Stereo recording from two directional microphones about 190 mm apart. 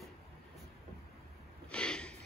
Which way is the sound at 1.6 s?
5° left (ahead or behind).